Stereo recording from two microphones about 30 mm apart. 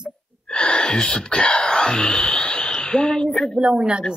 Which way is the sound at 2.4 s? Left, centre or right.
Left.